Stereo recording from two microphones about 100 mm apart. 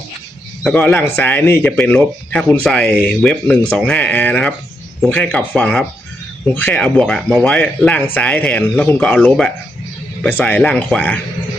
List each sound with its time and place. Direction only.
0.7 s speech: 20° left (ahead or behind)
2.0 s speech: 10° left (ahead or behind)